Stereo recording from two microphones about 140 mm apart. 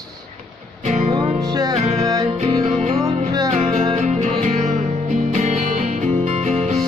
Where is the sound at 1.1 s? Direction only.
30° right (ahead or behind).